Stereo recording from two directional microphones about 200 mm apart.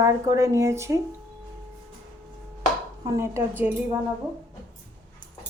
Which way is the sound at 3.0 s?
15° right (ahead or behind).